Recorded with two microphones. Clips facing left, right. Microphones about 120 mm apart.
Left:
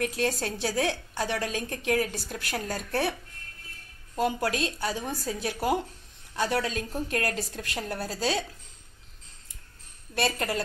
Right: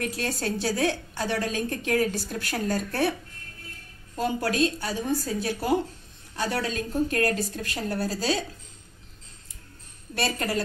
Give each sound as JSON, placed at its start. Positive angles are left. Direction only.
{"t": 0.0, "sound": "a woman's voice", "side_deg": 20}
{"t": 10.1, "sound": "a woman's voice", "side_deg": 20}